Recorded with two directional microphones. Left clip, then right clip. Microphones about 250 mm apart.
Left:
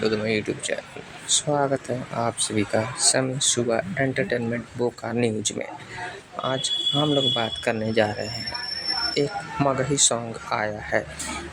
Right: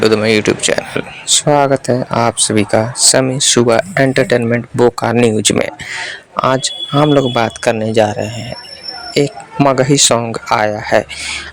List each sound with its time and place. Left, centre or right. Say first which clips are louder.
0.0 s speech: right 13 dB; right